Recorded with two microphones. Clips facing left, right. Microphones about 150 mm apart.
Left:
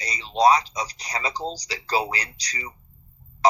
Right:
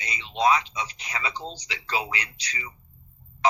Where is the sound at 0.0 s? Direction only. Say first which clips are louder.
Left 5 dB; 35° left (ahead or behind).